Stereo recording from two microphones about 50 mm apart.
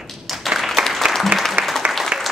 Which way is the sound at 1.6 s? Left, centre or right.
Right.